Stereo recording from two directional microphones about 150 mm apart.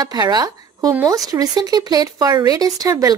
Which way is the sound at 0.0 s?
25° right (ahead or behind).